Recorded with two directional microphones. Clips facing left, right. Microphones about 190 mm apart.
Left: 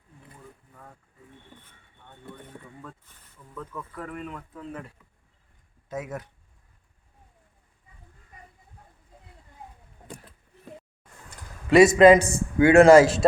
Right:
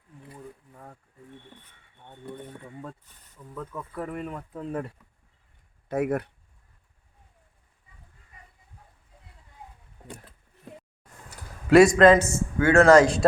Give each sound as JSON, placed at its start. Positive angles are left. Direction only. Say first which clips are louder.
{"t": 3.5, "sound": "speech", "louder": "right 1 dB", "side_deg": -20}
{"t": 3.9, "sound": "speech", "louder": "right 4 dB", "side_deg": -35}
{"t": 5.9, "sound": "speech", "louder": "right 8 dB", "side_deg": -60}
{"t": 11.3, "sound": "a sound", "louder": "right 3 dB", "side_deg": 0}
{"t": 12.1, "sound": "speech", "louder": "left 2 dB", "side_deg": 15}